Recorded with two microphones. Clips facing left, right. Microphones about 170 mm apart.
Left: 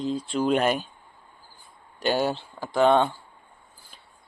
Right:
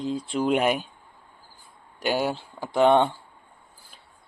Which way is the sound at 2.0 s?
10° right (ahead or behind).